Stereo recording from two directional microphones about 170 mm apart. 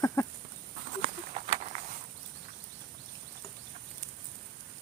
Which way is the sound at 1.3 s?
40° right (ahead or behind).